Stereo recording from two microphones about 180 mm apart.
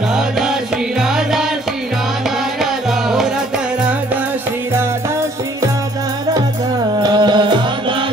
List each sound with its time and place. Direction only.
0.1 s music: 5° right (ahead or behind)
2.6 s music: centre (ahead or behind)
7.0 s music: 25° right (ahead or behind)